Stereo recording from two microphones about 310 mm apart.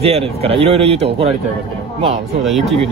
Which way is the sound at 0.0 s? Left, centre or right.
Centre.